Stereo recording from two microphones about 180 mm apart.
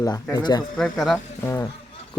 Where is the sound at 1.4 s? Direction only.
15° left (ahead or behind).